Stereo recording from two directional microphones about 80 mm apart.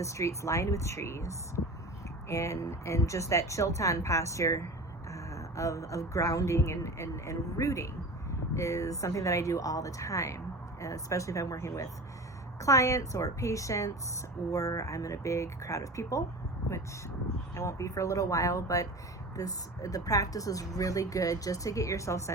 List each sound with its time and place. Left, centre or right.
0.0 s speech: left
17.5 s speech: left